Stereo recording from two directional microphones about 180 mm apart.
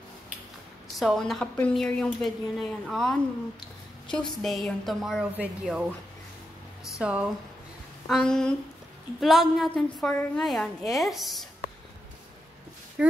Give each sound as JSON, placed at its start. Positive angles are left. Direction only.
{"t": 0.9, "sound": "a woman's voice", "side_deg": 0}
{"t": 4.4, "sound": "a woman's voice", "side_deg": 0}
{"t": 7.0, "sound": "speech", "side_deg": -5}
{"t": 8.1, "sound": "a woman's voice", "side_deg": 5}